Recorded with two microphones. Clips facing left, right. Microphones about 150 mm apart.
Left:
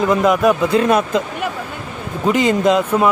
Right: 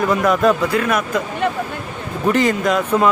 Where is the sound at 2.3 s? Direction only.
15° left (ahead or behind).